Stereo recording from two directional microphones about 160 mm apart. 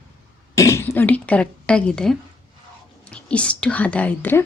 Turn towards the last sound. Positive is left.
turn(degrees=10)  # may be behind; listen again after turning